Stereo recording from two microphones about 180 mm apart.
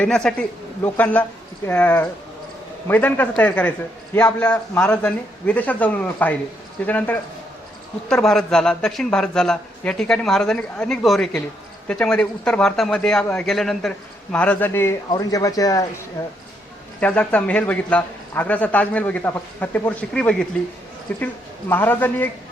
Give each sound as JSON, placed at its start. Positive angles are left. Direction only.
{"t": 0.0, "sound": "a man's voice", "side_deg": 5}
{"t": 17.0, "sound": "speech", "side_deg": 10}